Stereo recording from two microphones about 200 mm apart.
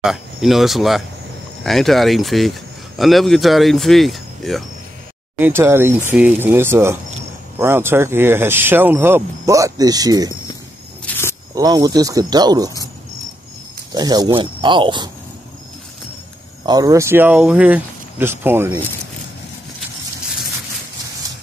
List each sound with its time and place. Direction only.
0.0 s speech: centre (ahead or behind)
5.4 s speech: 10° right (ahead or behind)
11.1 s walk: 10° left (ahead or behind)
11.5 s speech: 20° right (ahead or behind)
13.9 s speech: 20° right (ahead or behind)
16.6 s speech: 20° right (ahead or behind)